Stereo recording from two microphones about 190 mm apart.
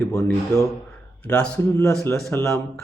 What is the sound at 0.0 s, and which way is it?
Speech, 15° left (ahead or behind).